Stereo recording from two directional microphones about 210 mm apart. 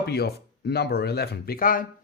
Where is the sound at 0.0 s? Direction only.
50° left (ahead or behind).